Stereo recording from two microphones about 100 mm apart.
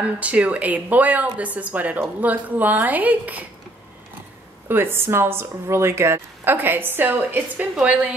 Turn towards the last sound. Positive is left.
turn(degrees=-15)  # may be behind; listen again after turning